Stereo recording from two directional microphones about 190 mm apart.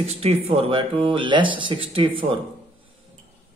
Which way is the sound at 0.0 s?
35° right (ahead or behind).